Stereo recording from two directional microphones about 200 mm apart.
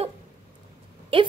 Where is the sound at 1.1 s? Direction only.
30° right (ahead or behind).